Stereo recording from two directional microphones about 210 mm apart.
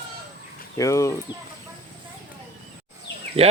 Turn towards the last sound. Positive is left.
turn(degrees=-30)  # may be behind; listen again after turning